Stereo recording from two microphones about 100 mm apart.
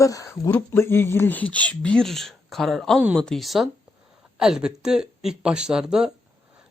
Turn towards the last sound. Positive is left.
turn(degrees=-5)  # may be behind; listen again after turning